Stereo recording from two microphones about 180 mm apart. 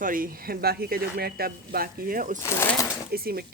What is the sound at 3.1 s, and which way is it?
Speech, 55° right (ahead or behind).